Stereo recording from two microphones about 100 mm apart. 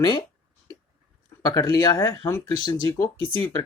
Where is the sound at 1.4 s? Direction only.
40° left (ahead or behind).